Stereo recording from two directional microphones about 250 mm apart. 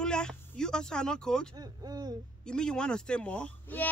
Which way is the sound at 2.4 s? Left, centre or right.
Centre.